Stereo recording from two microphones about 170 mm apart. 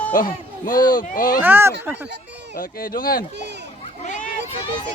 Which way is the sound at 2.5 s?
55° left (ahead or behind).